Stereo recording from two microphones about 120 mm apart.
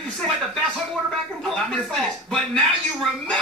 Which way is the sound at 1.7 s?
5° left (ahead or behind).